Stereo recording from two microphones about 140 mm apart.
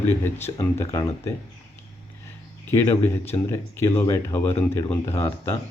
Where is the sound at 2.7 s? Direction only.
15° left (ahead or behind).